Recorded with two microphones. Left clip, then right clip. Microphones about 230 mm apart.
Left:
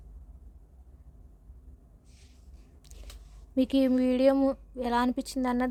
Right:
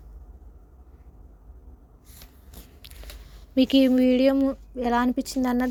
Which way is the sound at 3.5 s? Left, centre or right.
Centre.